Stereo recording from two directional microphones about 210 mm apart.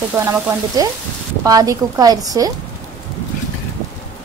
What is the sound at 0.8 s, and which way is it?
Speech, 15° right (ahead or behind).